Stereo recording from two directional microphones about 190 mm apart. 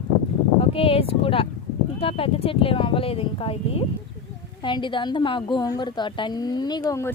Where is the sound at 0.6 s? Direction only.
30° left (ahead or behind).